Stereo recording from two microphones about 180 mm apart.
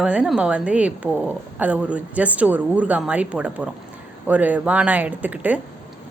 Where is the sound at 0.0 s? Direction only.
5° right (ahead or behind).